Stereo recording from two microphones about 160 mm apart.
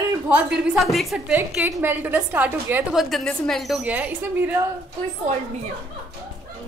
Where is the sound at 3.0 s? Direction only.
Centre (ahead or behind).